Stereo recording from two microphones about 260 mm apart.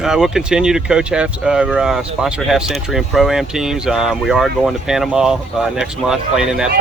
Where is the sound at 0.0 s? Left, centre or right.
Centre.